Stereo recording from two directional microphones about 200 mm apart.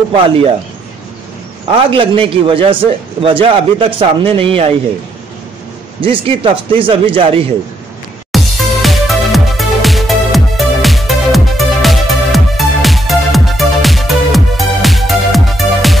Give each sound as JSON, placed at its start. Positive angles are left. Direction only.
{"t": 1.7, "sound": "speech", "side_deg": -25}
{"t": 5.9, "sound": "speech", "side_deg": -25}
{"t": 8.3, "sound": "music", "side_deg": 0}